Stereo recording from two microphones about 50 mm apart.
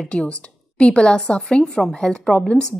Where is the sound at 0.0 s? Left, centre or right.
Left.